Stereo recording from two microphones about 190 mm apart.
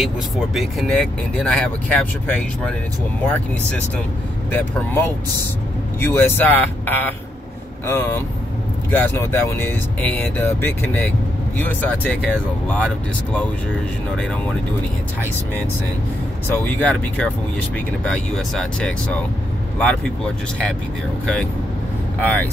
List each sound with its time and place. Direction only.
0.6 s speech: centre (ahead or behind)
4.5 s speech: 10° left (ahead or behind)
16.5 s speech: 10° left (ahead or behind)
22.2 s speech: 10° left (ahead or behind)